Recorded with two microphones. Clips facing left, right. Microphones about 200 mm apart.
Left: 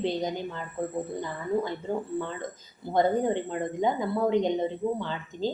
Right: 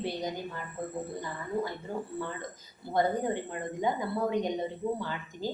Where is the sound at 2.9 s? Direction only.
20° left (ahead or behind).